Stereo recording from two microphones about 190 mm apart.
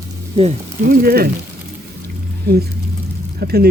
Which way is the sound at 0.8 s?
50° right (ahead or behind).